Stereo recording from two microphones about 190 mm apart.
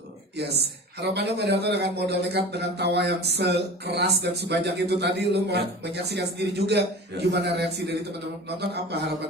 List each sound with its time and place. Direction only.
1.0 s a man's voice: 60° right (ahead or behind)